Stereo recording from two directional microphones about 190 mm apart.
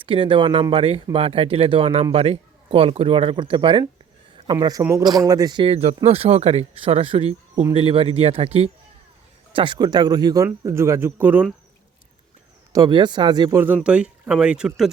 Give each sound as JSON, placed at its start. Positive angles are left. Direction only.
{"t": 0.0, "sound": "speech", "side_deg": -25}
{"t": 12.7, "sound": "speech", "side_deg": -20}
{"t": 13.7, "sound": "speech", "side_deg": -5}